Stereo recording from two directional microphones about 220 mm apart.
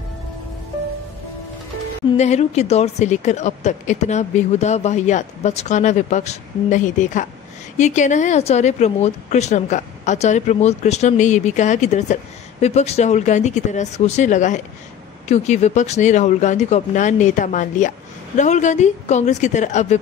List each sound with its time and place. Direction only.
2.1 s a woman's voice: 30° left (ahead or behind)